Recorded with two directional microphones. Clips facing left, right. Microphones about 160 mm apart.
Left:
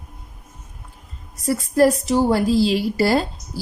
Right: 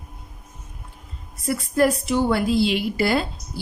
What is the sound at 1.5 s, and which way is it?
A woman's voice, 35° left (ahead or behind).